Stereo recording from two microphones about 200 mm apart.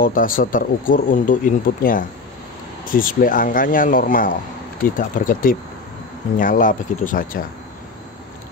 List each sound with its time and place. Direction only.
0.0 s speech: 45° left (ahead or behind)